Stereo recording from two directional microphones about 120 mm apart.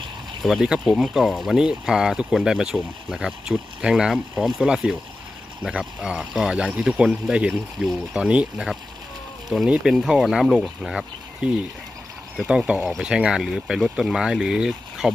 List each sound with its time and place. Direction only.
0.4 s speech: 5° right (ahead or behind)